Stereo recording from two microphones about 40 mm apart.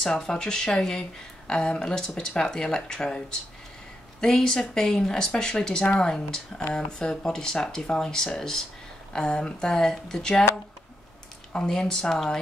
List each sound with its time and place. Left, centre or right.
0.2 s speech: centre
4.2 s speech: centre
9.1 s speech: left
11.6 s speech: centre